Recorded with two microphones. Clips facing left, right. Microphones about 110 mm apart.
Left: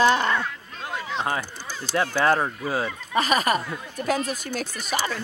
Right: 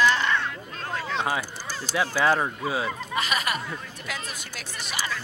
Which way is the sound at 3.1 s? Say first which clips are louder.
Left 7 dB; 40° left (ahead or behind).